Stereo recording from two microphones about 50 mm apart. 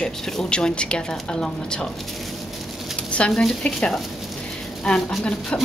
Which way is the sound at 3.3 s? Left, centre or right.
Centre.